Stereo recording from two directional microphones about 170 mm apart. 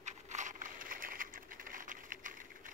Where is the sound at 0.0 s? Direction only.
45° right (ahead or behind).